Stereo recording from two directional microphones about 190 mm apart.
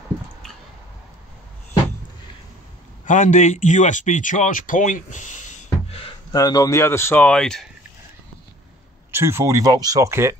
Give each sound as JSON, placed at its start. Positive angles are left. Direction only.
{"t": 3.1, "sound": "speech", "side_deg": 40}
{"t": 5.9, "sound": "a sound", "side_deg": 30}
{"t": 6.3, "sound": "speech", "side_deg": 20}
{"t": 9.1, "sound": "speech", "side_deg": -15}